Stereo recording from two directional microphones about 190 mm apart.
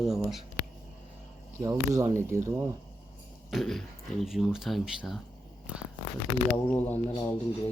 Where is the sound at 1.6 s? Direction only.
15° right (ahead or behind).